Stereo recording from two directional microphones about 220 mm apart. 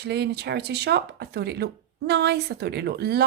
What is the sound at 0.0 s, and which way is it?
Speech, 50° right (ahead or behind).